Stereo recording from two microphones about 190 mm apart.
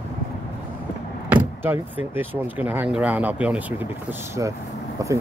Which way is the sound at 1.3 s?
10° right (ahead or behind).